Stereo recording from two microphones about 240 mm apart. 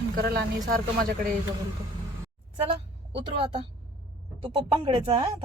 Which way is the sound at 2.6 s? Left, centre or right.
Right.